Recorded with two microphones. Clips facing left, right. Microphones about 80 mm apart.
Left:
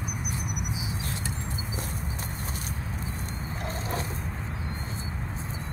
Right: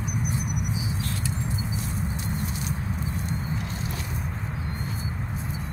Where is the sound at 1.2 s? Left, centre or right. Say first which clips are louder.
Right 4 dB; left.